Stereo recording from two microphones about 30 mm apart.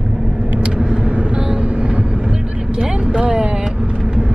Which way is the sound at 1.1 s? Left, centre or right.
Right.